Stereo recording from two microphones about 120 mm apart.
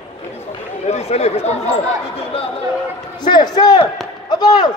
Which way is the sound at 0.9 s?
60° left (ahead or behind).